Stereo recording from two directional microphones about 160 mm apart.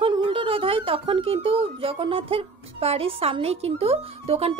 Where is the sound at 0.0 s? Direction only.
30° right (ahead or behind).